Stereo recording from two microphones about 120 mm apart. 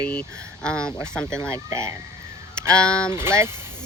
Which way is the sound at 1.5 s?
25° right (ahead or behind).